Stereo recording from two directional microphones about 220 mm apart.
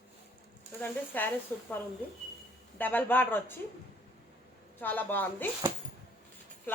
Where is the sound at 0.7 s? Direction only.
10° left (ahead or behind).